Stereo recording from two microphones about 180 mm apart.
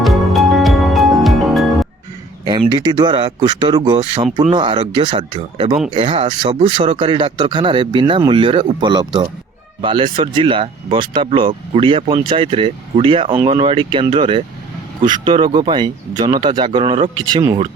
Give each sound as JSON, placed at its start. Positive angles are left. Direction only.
{"t": 0.0, "sound": "music", "side_deg": 0}
{"t": 2.4, "sound": "speech", "side_deg": -25}